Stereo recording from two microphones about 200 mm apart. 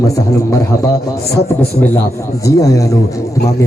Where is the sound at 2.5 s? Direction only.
15° left (ahead or behind).